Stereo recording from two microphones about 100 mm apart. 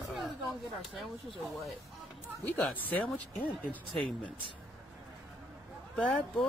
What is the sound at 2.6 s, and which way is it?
Speech, 10° left (ahead or behind).